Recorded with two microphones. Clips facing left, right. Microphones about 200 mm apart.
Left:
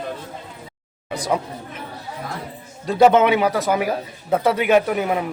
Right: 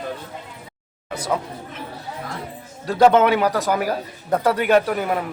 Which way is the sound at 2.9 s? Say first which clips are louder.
Left 1 dB; 10° left (ahead or behind).